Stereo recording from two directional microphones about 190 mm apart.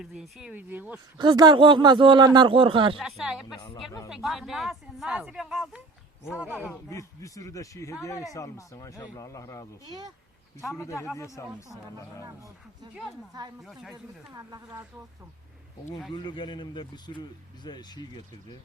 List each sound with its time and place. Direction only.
0.0 s speech: 5° right (ahead or behind)
1.2 s speech: 20° right (ahead or behind)
3.0 s speech: centre (ahead or behind)
6.7 s speech: 15° left (ahead or behind)
10.7 s speech: 15° left (ahead or behind)
12.2 s speech: 15° right (ahead or behind)
13.6 s speech: centre (ahead or behind)
13.9 s speech: 20° right (ahead or behind)
16.1 s a man's voice: 25° left (ahead or behind)